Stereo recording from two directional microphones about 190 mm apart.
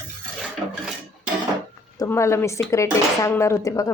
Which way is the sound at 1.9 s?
15° left (ahead or behind).